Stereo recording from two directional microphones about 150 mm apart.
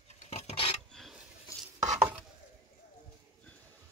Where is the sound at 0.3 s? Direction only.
45° left (ahead or behind).